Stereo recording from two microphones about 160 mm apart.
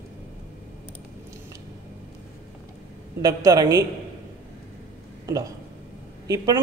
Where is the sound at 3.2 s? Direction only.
20° right (ahead or behind).